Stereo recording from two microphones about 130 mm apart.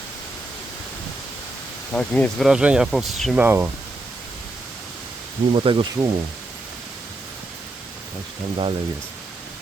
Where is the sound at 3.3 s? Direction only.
15° right (ahead or behind).